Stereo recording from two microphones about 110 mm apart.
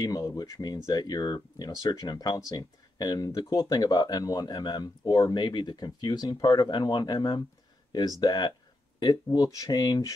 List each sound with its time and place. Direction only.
0.0 s speech: 30° left (ahead or behind)